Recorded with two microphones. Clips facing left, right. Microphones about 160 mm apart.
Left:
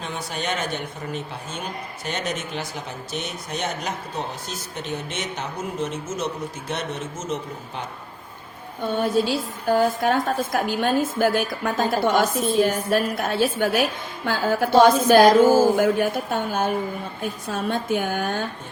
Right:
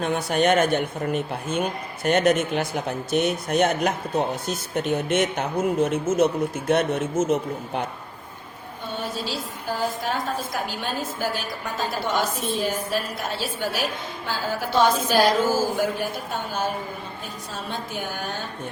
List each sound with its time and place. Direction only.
0.0 s speech: 55° right (ahead or behind)
9.0 s a woman's voice: 55° left (ahead or behind)
12.6 s a woman's voice: 55° left (ahead or behind)